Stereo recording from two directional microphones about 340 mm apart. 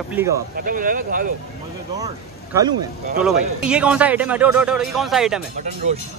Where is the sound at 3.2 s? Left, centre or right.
Centre.